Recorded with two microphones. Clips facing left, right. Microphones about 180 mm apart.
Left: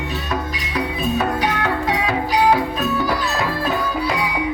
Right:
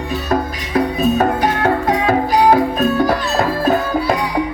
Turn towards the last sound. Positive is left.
turn(degrees=-45)  # may be behind; listen again after turning